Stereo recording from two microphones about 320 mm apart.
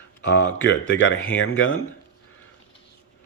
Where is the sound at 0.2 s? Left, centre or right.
Left.